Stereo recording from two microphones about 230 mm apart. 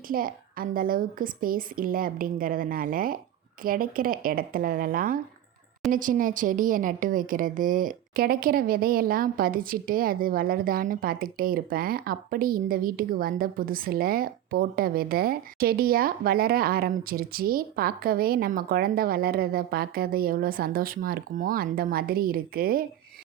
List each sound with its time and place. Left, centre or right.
0.1 s a woman's voice: right